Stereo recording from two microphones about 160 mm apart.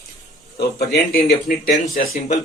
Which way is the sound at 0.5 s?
80° left.